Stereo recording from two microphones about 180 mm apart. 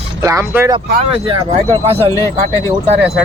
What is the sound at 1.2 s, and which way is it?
Speech, 25° right (ahead or behind).